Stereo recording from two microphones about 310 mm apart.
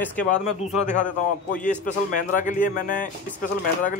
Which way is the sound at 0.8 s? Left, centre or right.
Left.